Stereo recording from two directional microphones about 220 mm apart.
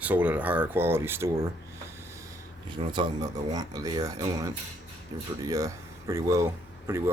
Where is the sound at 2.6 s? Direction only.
20° right (ahead or behind).